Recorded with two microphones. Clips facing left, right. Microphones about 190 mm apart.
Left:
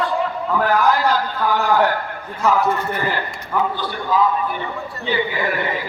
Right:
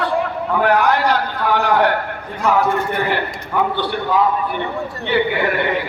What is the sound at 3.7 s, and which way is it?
A man's voice, 65° right (ahead or behind).